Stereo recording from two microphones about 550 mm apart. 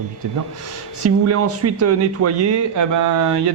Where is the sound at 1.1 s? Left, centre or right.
Right.